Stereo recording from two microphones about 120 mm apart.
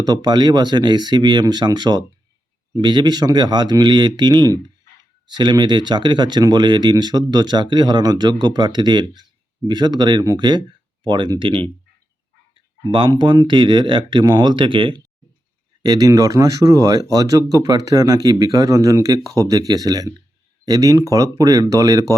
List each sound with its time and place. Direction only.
0.0 s speech: 35° right (ahead or behind)
12.9 s speech: 40° right (ahead or behind)
15.8 s speech: 30° right (ahead or behind)